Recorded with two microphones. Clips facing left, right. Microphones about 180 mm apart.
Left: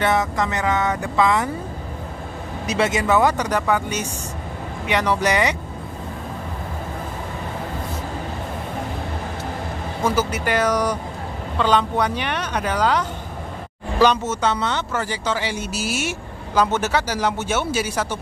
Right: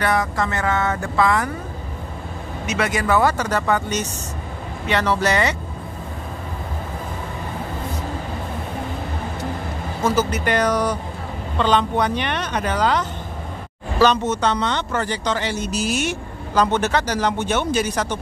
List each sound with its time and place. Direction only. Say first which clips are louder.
0.0 s speech: left 1 dB; 20° left (ahead or behind)
2.6 s speech: left 2 dB; 30° left (ahead or behind); by 5.6 s 15° left (ahead or behind)
10.0 s speech: right 1 dB; 10° left (ahead or behind)